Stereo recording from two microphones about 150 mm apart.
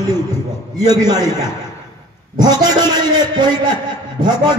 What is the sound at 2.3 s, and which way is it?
A man's voice, 25° right (ahead or behind).